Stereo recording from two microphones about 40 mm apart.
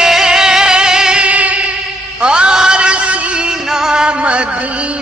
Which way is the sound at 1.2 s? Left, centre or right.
Right.